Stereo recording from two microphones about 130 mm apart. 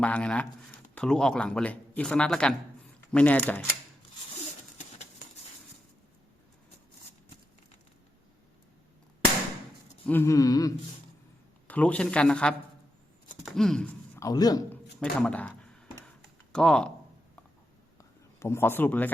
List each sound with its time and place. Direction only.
0.0 s speech: 10° left (ahead or behind)
10.1 s a sound: 20° left (ahead or behind)
11.7 s speech: 10° left (ahead or behind)
13.4 s chopping: 5° left (ahead or behind)
14.2 s a man's voice: 30° left (ahead or behind)
15.2 s speech: 10° left (ahead or behind)
17.9 s a sound: 20° left (ahead or behind)